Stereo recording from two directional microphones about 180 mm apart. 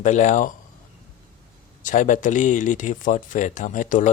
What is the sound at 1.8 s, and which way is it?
Speech, 45° left (ahead or behind).